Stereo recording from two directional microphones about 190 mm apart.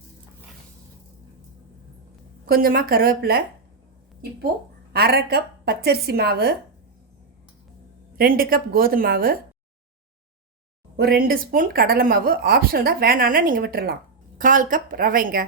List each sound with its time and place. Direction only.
2.5 s speech: 50° right (ahead or behind)
4.9 s a woman's voice: 55° right (ahead or behind)
8.2 s speech: 50° right (ahead or behind)
10.9 s speech: 55° right (ahead or behind)